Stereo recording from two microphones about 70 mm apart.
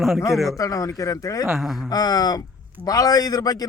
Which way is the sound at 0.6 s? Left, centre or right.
Left.